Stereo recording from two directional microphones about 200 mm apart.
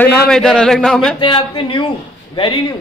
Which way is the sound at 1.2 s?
25° left (ahead or behind).